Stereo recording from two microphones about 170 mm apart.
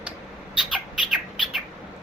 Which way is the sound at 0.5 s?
Centre (ahead or behind).